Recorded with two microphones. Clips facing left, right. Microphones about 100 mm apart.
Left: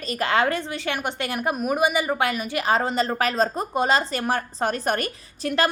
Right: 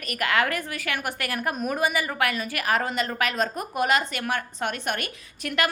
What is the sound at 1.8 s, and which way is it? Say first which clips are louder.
A woman's voice: left 3 dB; 20° left (ahead or behind).